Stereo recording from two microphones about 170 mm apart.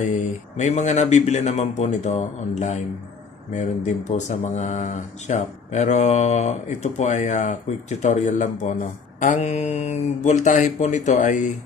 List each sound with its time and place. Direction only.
0.0 s speech: 45° left (ahead or behind)